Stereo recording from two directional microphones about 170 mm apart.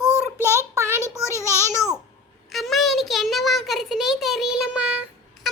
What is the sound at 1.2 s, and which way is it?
Speech, 15° left (ahead or behind).